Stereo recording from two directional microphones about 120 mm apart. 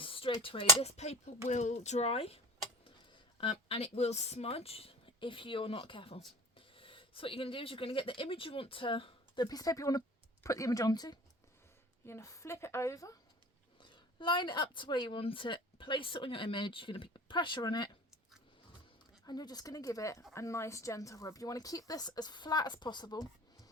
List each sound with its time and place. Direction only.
0.0 s a sound: 45° left (ahead or behind)
0.8 s speech: 65° left (ahead or behind)
3.4 s speech: 55° left (ahead or behind); by 11.2 s 35° left (ahead or behind)
12.0 s speech: 25° left (ahead or behind)
13.9 s a woman's voice: 40° left (ahead or behind)
19.2 s speech: 35° left (ahead or behind)